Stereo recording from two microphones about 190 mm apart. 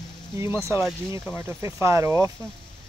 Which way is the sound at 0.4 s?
15° right (ahead or behind).